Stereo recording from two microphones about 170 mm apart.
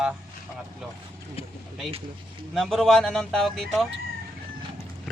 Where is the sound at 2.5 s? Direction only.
Centre (ahead or behind).